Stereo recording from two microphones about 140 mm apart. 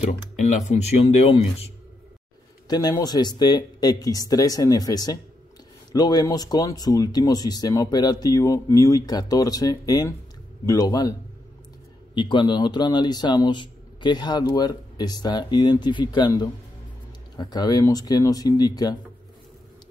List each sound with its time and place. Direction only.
0.0 s speech: 55° left (ahead or behind)
1.0 s speech: 40° left (ahead or behind)
2.7 s speech: 30° left (ahead or behind)